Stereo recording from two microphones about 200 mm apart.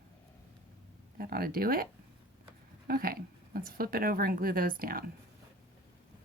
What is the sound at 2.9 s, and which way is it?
Speech, 50° right (ahead or behind).